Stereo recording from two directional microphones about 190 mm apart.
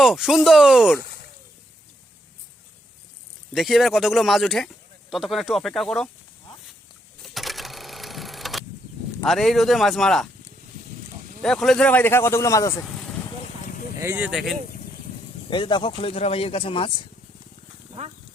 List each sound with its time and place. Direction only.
0.0 s speech: centre (ahead or behind)
3.5 s speech: centre (ahead or behind)
7.3 s sewing machine: centre (ahead or behind)
9.2 s speech: centre (ahead or behind)
11.4 s speech: 5° left (ahead or behind)
14.0 s speech: 15° right (ahead or behind)
14.3 s speech: centre (ahead or behind)
15.4 s speech: 25° left (ahead or behind)